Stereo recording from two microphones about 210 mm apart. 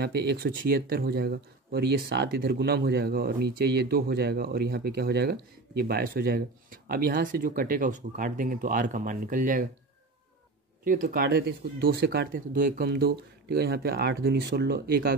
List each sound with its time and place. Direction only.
0.0 s speech: 50° right (ahead or behind)
10.8 s speech: 40° right (ahead or behind)